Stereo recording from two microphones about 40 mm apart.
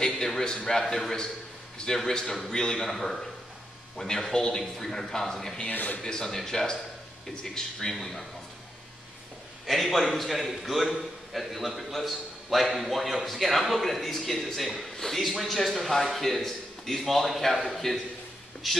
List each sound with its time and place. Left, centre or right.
0.0 s a man's voice: centre
2.8 s a man's voice: centre
5.7 s a man's voice: left
6.0 s a man's voice: centre
9.7 s a man's voice: centre